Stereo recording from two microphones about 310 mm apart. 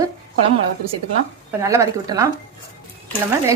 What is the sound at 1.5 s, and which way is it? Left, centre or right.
Speech, centre.